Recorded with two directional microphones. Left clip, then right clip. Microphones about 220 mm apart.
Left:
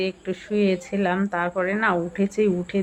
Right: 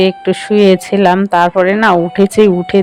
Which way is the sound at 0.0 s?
40° right (ahead or behind).